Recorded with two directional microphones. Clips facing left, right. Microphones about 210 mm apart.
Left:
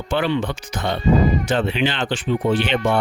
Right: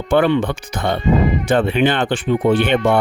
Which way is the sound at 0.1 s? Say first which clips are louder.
Right 6 dB; 55° right (ahead or behind).